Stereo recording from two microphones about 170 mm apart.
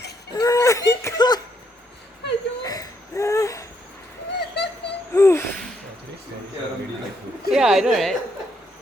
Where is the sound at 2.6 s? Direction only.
20° left (ahead or behind).